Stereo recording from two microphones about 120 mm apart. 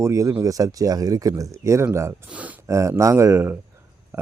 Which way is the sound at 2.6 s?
25° right (ahead or behind).